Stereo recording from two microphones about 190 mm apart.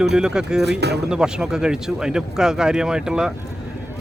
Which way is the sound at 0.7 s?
60° right (ahead or behind).